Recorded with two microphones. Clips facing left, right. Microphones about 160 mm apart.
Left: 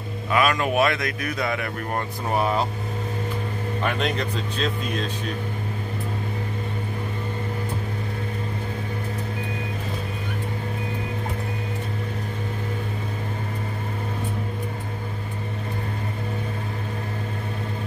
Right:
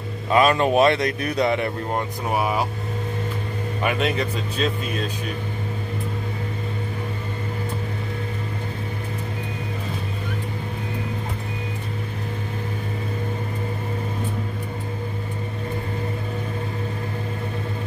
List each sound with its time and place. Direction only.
0.3 s a man's voice: 30° right (ahead or behind)
2.0 s speech: 10° right (ahead or behind)
3.8 s speech: 5° right (ahead or behind)